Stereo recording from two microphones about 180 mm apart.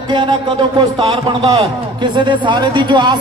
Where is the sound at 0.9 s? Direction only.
35° right (ahead or behind).